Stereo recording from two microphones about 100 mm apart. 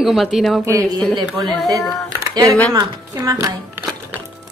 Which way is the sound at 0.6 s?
30° right (ahead or behind).